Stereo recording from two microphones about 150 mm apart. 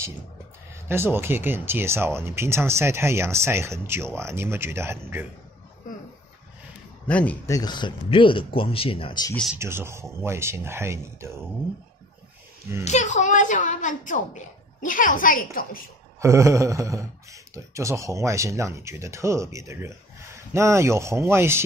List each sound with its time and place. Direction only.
0.8 s speech: 15° right (ahead or behind)
7.1 s speech: 10° left (ahead or behind)
7.4 s speech: 25° left (ahead or behind)
9.6 s speech: 15° right (ahead or behind)
12.8 s a woman's voice: 50° left (ahead or behind)
16.2 s speech: 20° right (ahead or behind)